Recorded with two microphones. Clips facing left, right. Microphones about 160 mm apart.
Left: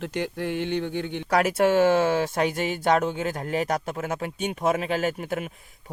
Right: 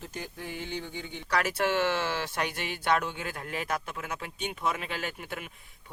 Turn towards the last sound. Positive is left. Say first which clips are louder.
# left 10 dB
turn(degrees=45)  # may be behind; listen again after turning